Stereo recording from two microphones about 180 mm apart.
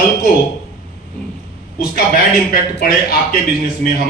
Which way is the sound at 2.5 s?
55° left (ahead or behind).